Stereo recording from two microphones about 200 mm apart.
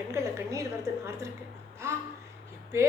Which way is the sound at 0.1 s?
15° right (ahead or behind).